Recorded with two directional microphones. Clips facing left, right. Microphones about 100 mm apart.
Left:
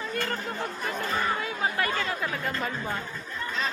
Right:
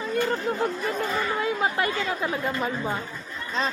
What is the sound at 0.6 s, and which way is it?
Speech, 35° right (ahead or behind).